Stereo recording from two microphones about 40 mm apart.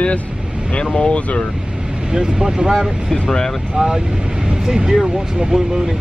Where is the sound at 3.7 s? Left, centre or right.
Centre.